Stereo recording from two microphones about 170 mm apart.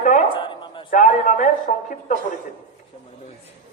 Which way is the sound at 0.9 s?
50° left (ahead or behind).